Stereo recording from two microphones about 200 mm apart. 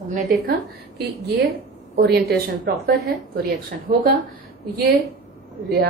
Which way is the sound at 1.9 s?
55° right (ahead or behind).